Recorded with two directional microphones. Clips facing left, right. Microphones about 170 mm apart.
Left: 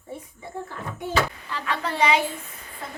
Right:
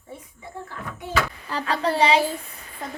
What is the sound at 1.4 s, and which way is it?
Speech, 40° right (ahead or behind).